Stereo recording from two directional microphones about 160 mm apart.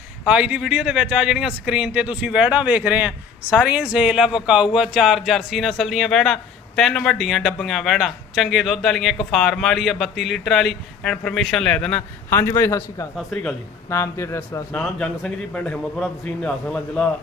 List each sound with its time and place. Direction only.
0.3 s speech: 5° right (ahead or behind); by 13.1 s 20° left (ahead or behind)
13.1 s speech: centre (ahead or behind)
13.9 s a man's voice: 15° left (ahead or behind)
14.7 s a man's voice: 5° left (ahead or behind)